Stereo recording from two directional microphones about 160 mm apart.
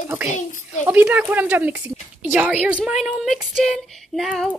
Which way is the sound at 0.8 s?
10° right (ahead or behind).